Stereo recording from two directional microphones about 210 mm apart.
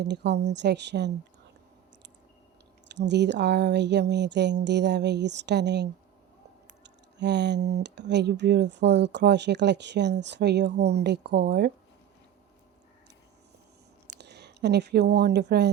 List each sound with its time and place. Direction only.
0.1 s speech: 55° right (ahead or behind)
2.9 s speech: 55° right (ahead or behind)
14.2 s speech: 55° right (ahead or behind)